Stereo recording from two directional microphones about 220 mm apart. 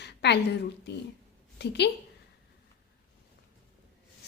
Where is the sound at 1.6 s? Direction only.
50° left (ahead or behind).